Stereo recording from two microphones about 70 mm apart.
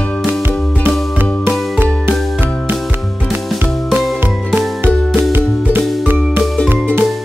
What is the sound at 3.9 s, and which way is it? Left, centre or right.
Music, centre.